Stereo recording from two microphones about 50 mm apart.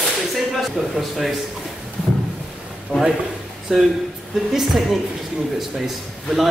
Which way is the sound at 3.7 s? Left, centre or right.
Centre.